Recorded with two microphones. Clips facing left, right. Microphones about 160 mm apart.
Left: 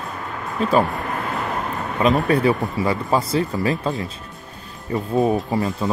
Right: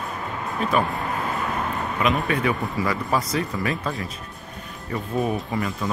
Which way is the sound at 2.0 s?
35° left (ahead or behind).